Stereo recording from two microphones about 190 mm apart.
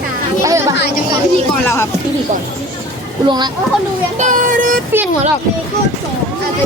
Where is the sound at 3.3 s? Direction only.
25° right (ahead or behind).